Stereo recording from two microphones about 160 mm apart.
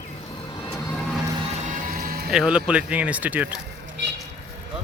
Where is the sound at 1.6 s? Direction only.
60° right (ahead or behind).